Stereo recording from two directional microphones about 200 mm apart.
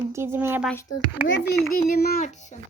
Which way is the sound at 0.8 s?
75° left (ahead or behind).